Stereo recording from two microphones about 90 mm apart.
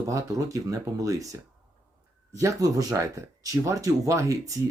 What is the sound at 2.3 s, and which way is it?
Speech, 40° right (ahead or behind).